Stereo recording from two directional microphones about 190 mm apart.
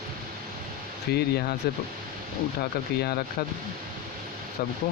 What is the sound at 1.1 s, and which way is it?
Speech, 55° left (ahead or behind).